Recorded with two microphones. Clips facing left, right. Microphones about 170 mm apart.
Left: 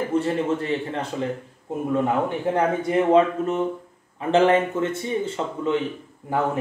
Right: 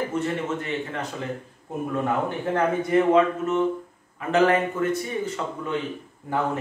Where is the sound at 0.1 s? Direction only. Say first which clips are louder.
Left 4 dB; 30° left (ahead or behind).